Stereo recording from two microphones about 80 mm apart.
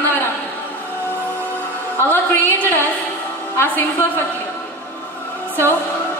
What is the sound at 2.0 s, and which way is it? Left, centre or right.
A woman's voice, left.